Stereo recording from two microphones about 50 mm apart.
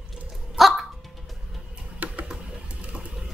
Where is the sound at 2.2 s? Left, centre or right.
Centre.